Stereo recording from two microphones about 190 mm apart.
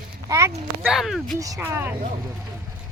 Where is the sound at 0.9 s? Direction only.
Centre (ahead or behind).